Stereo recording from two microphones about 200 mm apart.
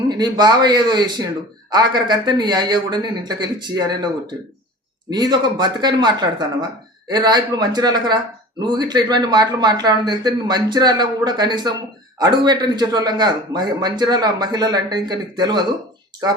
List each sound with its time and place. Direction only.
0.1 s speech: 20° right (ahead or behind)